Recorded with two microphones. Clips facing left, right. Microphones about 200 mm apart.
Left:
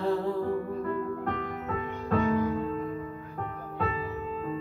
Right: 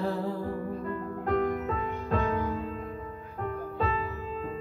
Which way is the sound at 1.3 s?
45° right (ahead or behind).